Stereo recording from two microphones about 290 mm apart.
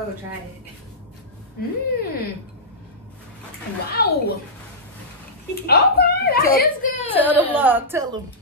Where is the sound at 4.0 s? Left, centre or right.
Left.